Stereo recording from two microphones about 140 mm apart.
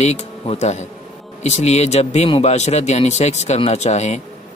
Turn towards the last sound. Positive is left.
turn(degrees=55)  # may be behind; listen again after turning